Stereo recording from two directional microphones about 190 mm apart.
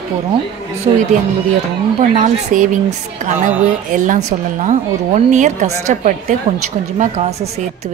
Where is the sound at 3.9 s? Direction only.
40° right (ahead or behind).